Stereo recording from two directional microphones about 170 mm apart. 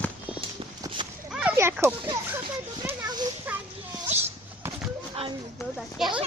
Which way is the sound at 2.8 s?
25° right (ahead or behind).